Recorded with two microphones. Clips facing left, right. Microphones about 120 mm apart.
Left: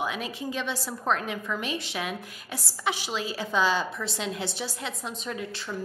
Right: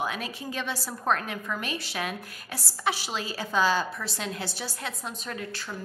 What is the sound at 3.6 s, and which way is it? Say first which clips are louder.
A woman's voice: even; 20° left (ahead or behind).